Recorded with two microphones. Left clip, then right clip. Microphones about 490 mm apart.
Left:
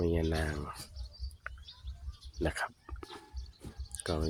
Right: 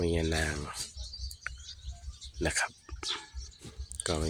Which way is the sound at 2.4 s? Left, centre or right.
Left.